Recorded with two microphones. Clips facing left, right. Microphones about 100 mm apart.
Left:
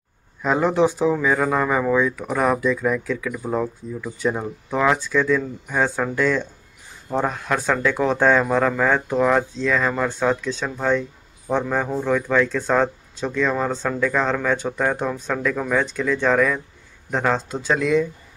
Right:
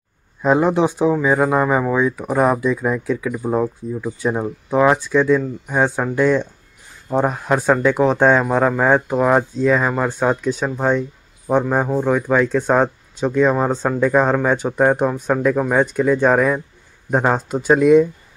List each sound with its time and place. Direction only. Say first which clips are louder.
0.4 s speech: right 3 dB; 20° right (ahead or behind)